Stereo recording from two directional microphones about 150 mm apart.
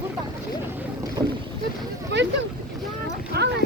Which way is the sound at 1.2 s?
25° right (ahead or behind).